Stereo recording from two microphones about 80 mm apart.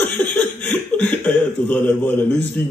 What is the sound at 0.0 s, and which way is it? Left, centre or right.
Speech, centre.